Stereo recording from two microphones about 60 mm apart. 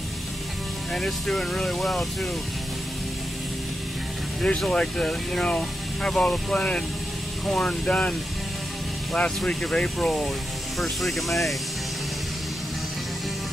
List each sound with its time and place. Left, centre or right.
0.9 s speech: centre
4.7 s speech: centre